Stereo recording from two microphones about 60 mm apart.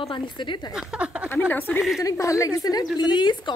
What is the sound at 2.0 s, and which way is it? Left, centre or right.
Speech, left.